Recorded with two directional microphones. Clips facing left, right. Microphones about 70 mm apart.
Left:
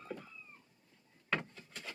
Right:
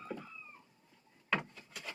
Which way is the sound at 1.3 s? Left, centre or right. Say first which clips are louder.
Right 2 dB; centre.